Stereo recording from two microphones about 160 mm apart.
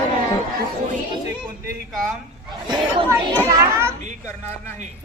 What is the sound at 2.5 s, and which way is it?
Speech, 25° right (ahead or behind).